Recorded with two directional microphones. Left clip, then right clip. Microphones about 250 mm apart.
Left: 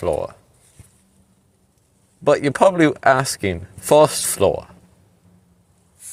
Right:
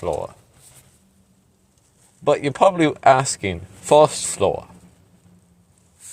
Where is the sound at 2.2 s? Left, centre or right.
Left.